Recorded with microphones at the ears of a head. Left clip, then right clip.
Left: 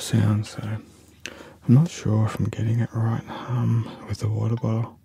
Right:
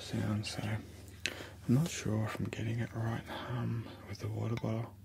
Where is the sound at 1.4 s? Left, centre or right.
Left.